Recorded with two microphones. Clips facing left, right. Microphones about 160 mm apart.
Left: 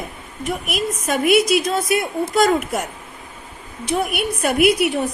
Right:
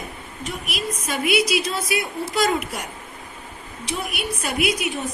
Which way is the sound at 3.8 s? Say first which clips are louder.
Left 7 dB; 55° left (ahead or behind).